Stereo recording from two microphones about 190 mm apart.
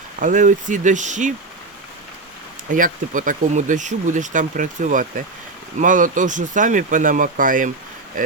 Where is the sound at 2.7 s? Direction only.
45° right (ahead or behind).